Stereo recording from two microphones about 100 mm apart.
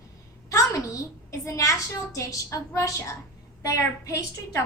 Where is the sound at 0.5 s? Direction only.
35° left (ahead or behind).